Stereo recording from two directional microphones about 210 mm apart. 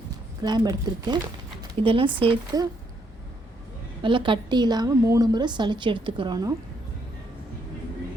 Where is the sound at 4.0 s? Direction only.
25° right (ahead or behind).